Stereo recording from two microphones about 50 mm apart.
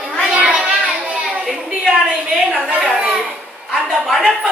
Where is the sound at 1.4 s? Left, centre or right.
Centre.